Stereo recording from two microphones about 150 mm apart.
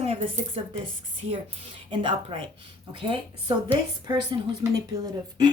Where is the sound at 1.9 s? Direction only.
35° right (ahead or behind).